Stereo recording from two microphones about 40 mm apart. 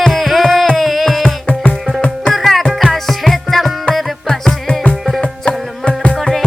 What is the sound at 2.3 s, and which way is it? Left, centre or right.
Music, centre.